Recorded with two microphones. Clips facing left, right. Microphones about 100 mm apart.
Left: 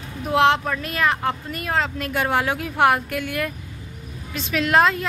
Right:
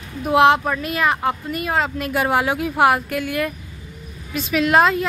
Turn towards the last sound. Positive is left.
turn(degrees=-5)  # may be behind; listen again after turning